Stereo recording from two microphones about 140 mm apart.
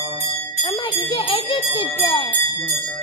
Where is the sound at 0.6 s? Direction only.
40° left (ahead or behind).